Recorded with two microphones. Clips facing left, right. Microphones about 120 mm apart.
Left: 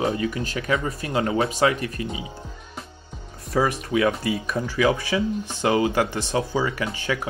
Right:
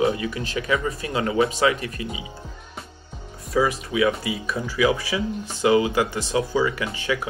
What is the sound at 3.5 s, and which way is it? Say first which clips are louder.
Speech: even; 50° left (ahead or behind).